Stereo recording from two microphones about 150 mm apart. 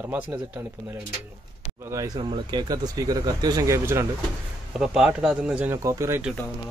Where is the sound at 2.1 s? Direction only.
30° right (ahead or behind).